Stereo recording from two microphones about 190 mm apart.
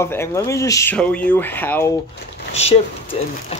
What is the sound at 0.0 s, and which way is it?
Speech, 15° left (ahead or behind).